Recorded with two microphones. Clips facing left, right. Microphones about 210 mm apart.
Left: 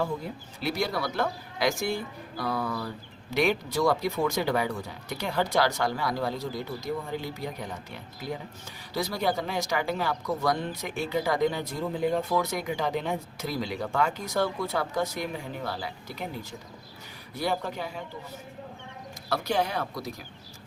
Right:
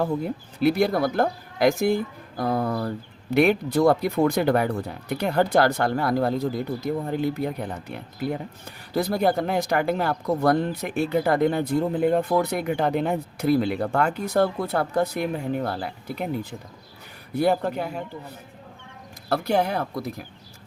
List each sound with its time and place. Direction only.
0.6 s speech: 55° right (ahead or behind)
17.3 s speech: 60° right (ahead or behind)
19.3 s speech: 55° right (ahead or behind)